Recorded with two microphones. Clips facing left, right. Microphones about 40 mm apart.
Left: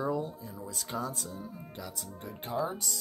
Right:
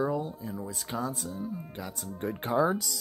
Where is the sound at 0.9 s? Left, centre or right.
Centre.